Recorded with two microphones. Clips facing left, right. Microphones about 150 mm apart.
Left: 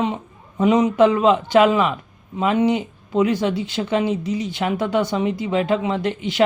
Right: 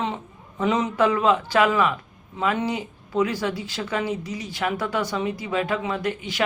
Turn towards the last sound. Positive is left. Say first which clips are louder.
# left 4 dB
turn(degrees=25)  # may be behind; listen again after turning